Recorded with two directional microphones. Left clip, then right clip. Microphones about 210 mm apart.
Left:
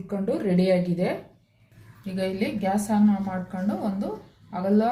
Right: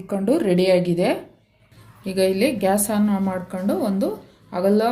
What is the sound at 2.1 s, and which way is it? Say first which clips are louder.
A woman's voice: right 9 dB; 50° right (ahead or behind).